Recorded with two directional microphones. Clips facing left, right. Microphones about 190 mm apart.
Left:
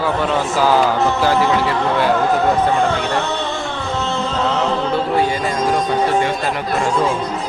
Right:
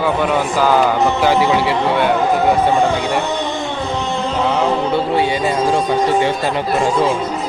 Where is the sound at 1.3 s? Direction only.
20° right (ahead or behind).